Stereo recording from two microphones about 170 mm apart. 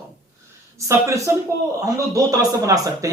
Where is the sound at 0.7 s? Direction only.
15° right (ahead or behind).